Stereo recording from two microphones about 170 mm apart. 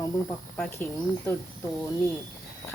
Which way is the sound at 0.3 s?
10° left (ahead or behind).